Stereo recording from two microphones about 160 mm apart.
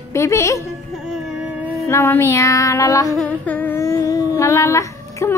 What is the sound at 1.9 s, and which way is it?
Speech, 15° left (ahead or behind).